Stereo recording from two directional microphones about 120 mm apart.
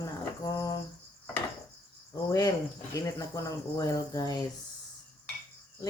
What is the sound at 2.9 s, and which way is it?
Speech, 30° left (ahead or behind).